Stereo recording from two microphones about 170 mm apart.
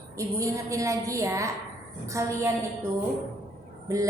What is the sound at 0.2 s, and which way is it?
A woman's voice, 20° right (ahead or behind).